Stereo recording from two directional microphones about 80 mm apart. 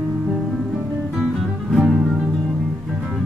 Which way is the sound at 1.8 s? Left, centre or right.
Centre.